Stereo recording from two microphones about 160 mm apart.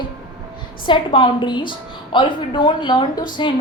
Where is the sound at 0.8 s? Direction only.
30° left (ahead or behind).